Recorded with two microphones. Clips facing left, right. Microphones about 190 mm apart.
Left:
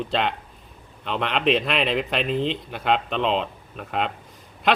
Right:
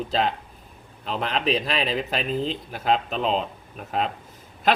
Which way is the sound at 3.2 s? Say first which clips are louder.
Left 1 dB; 40° right (ahead or behind).